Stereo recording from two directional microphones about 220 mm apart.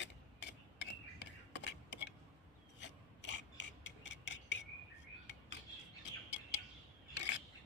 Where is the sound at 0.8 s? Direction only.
55° left (ahead or behind).